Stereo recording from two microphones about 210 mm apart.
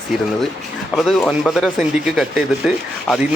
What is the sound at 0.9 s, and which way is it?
Speech, centre (ahead or behind).